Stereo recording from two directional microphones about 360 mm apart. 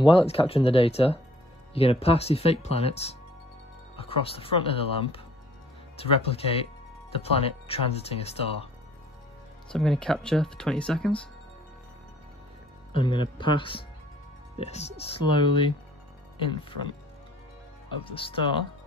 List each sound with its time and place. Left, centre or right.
0.0 s speech: centre
9.7 s speech: centre
12.9 s speech: centre
18.0 s speech: centre